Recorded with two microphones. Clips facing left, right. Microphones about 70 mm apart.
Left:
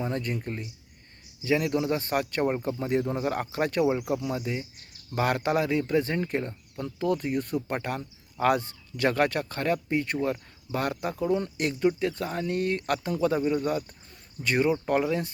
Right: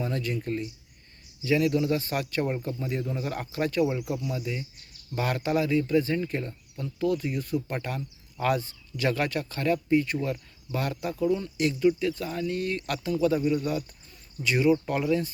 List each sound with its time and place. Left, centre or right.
0.3 s speech: left